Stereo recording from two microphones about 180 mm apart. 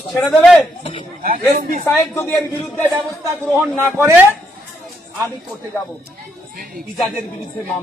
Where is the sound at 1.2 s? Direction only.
50° right (ahead or behind).